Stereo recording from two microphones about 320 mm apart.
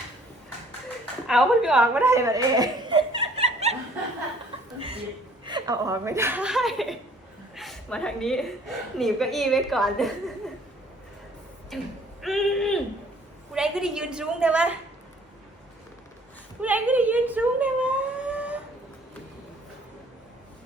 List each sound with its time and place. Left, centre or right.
1.3 s speech: centre
5.5 s a woman's voice: centre
11.7 s a woman's voice: centre
12.2 s a sound: centre
13.5 s a woman's voice: centre
16.6 s a sound: centre